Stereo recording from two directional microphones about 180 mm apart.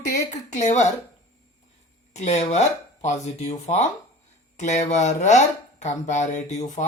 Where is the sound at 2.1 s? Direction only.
40° left (ahead or behind).